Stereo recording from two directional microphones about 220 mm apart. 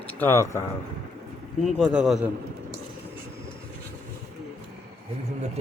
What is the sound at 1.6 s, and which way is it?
Speech, centre (ahead or behind).